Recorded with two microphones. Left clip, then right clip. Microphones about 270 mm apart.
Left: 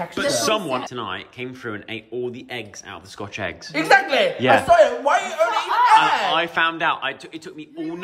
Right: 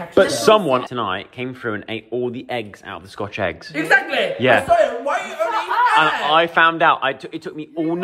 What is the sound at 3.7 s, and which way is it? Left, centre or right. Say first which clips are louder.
Speech: left 1 dB; left.